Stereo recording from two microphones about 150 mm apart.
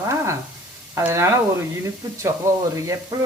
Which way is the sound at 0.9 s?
20° right (ahead or behind).